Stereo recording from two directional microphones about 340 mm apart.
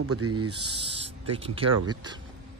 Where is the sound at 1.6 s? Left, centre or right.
Right.